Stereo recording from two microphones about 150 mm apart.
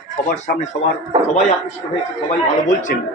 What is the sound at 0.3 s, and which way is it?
Speech, 50° left (ahead or behind).